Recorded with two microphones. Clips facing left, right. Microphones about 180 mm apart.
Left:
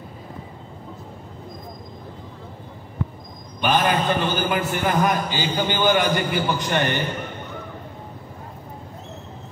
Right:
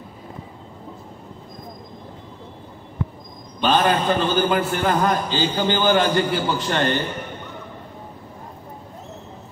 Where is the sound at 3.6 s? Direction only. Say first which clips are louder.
Right 2 dB; 10° left (ahead or behind).